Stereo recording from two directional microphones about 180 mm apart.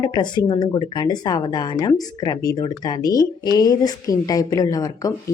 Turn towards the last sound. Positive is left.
turn(degrees=20)  # may be behind; listen again after turning